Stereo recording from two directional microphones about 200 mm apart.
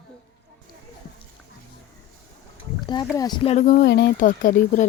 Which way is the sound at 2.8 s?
20° left (ahead or behind).